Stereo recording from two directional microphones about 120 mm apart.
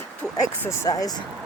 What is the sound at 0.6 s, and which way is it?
Speech, 30° left (ahead or behind).